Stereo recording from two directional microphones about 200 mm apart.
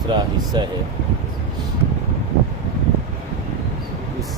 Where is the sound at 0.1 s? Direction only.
20° right (ahead or behind).